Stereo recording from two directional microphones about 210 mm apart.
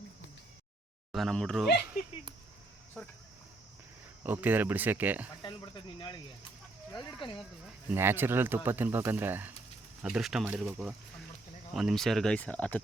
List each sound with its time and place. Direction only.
1.1 s speech: centre (ahead or behind)
4.2 s speech: 10° right (ahead or behind)
5.4 s speech: 20° left (ahead or behind)
7.9 s speech: 10° right (ahead or behind); by 12.8 s 5° left (ahead or behind)